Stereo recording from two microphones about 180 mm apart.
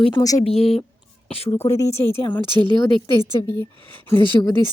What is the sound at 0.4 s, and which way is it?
Speech, 35° left (ahead or behind).